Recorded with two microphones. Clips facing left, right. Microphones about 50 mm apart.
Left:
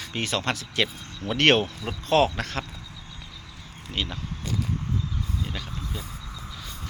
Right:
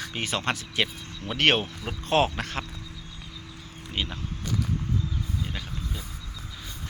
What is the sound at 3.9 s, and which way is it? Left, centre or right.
Speech, centre.